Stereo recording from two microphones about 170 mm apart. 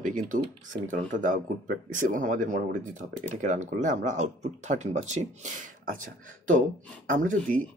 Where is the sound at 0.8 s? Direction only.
50° right (ahead or behind).